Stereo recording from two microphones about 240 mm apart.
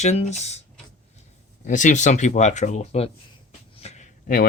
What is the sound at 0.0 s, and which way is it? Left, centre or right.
Speech, left.